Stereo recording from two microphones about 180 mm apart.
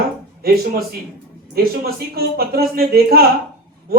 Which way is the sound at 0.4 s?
60° right (ahead or behind).